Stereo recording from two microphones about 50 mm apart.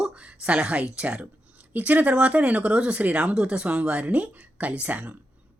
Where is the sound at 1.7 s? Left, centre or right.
Right.